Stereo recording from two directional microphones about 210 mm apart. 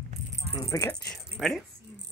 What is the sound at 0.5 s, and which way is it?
Speech, 15° left (ahead or behind).